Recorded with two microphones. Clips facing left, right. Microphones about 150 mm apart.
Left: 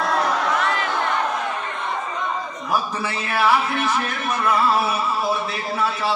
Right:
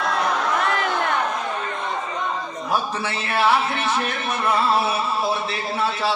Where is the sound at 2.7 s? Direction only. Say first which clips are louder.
Left 1 dB; 25° right (ahead or behind).